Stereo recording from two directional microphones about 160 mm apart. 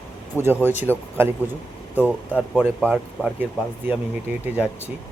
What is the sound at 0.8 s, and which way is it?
Speech, 15° right (ahead or behind).